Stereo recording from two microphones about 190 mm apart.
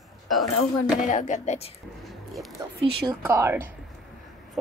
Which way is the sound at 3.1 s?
15° right (ahead or behind).